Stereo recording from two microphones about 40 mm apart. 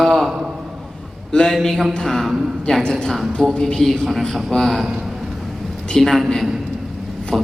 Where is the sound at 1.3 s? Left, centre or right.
Centre.